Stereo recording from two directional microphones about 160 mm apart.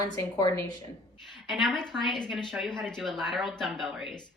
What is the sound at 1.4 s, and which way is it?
A woman's voice, centre (ahead or behind).